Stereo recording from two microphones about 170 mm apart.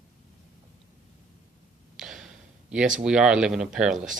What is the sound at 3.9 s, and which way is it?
Speech, 50° right (ahead or behind).